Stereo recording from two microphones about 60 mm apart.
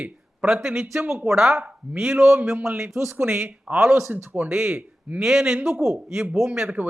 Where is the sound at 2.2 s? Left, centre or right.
Right.